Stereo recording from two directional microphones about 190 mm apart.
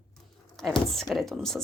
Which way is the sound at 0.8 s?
Centre (ahead or behind).